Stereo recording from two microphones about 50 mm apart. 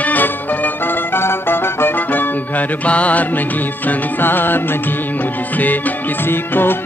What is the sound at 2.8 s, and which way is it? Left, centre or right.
Music, left.